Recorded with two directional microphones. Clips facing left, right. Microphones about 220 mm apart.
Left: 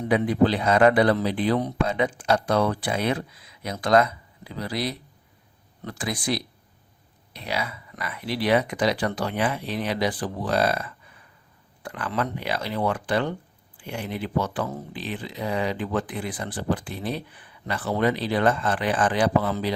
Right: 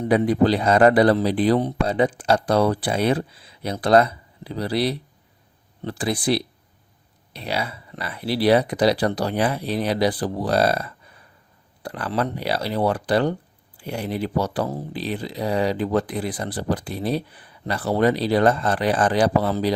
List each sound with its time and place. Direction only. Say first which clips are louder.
0.1 s speech: right 3 dB; 35° right (ahead or behind)